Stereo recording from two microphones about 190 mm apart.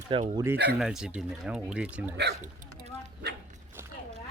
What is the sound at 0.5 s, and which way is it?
Speech, 60° right (ahead or behind).